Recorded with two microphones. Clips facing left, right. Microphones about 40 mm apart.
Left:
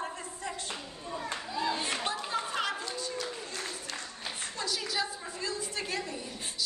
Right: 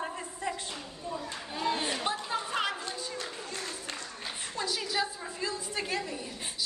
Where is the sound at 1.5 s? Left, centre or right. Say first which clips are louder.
Right 1 dB; right.